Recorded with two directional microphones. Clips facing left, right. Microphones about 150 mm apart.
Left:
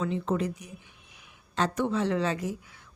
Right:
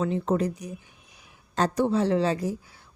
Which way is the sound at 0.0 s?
40° right (ahead or behind).